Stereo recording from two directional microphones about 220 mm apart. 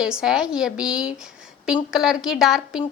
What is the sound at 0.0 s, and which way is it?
A woman's voice, 5° right (ahead or behind).